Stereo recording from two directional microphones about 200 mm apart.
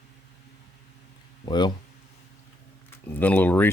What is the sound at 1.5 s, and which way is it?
Speech, 20° left (ahead or behind).